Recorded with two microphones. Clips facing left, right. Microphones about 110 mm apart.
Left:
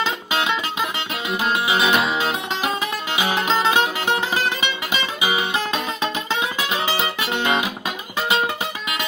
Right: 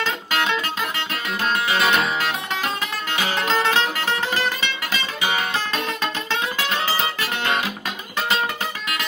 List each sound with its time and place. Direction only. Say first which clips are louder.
0.0 s music: left 1 dB; 10° left (ahead or behind)